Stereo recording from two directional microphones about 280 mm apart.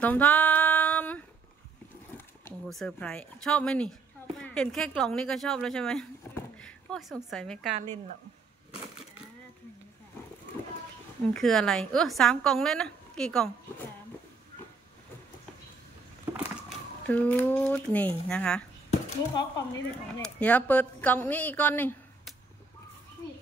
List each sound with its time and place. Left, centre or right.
0.0 s music: centre
2.1 s a woman's voice: centre
11.3 s a woman's voice: centre
17.1 s a woman's voice: centre